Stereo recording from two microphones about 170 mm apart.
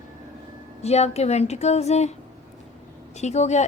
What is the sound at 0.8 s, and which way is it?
Speech, 40° left (ahead or behind).